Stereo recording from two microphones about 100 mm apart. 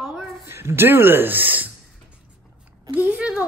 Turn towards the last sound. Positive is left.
turn(degrees=-15)  # may be behind; listen again after turning